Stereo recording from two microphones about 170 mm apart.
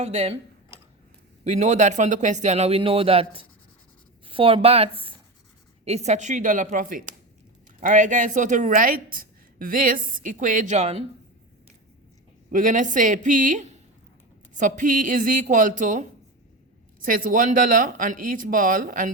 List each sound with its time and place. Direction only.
0.0 s speech: 40° right (ahead or behind)
1.5 s speech: 45° right (ahead or behind)
12.5 s speech: 50° right (ahead or behind)